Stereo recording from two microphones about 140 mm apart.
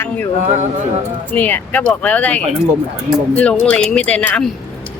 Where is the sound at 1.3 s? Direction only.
15° left (ahead or behind).